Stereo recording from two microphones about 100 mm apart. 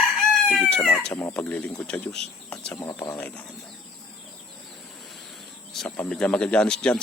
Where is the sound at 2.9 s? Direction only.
25° left (ahead or behind).